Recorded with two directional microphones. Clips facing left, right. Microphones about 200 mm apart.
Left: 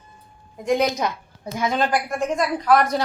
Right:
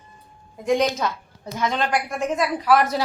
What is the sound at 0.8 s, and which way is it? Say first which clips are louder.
Speech: even; 15° left (ahead or behind).